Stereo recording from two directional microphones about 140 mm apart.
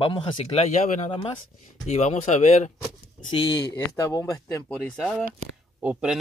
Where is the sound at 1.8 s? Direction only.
55° left (ahead or behind).